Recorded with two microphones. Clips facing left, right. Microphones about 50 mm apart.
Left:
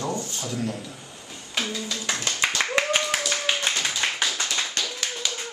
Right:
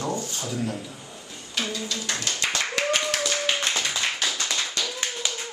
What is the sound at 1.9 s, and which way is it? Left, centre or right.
Clapping, left.